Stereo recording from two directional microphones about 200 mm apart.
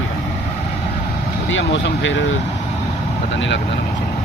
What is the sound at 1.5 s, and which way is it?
Speech, 70° left (ahead or behind).